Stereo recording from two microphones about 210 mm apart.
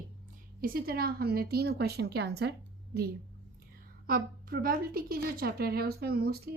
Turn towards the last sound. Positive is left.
turn(degrees=-50)  # may be behind; listen again after turning